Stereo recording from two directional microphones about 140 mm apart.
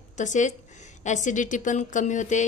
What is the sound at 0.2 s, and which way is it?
A woman's voice, 60° left (ahead or behind).